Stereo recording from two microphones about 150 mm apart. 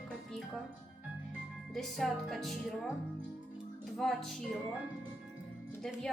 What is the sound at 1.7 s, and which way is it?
Speech, centre (ahead or behind).